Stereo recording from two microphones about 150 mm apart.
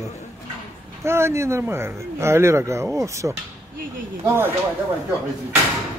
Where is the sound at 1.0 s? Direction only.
15° right (ahead or behind).